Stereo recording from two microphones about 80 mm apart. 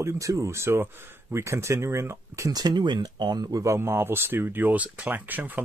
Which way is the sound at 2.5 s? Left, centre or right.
Right.